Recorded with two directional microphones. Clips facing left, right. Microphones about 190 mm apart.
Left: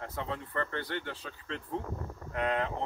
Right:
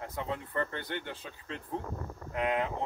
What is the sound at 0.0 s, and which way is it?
Speech, 15° right (ahead or behind).